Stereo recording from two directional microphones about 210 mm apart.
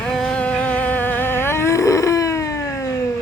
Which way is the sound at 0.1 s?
5° left (ahead or behind).